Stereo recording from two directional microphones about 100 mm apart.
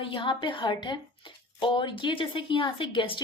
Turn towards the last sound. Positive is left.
turn(degrees=55)  # may be behind; listen again after turning